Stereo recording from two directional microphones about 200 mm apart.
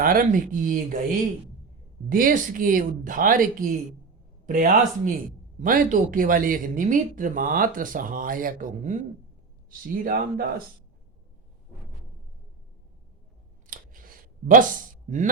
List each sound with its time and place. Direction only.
0.0 s speech: 45° right (ahead or behind)
2.0 s speech: 45° right (ahead or behind)
4.4 s speech: 40° right (ahead or behind)
13.7 s a sound: 45° right (ahead or behind)